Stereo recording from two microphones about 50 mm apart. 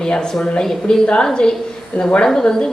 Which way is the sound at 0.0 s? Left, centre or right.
Centre.